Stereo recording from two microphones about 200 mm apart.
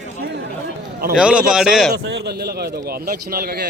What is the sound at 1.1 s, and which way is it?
Speech, 5° right (ahead or behind).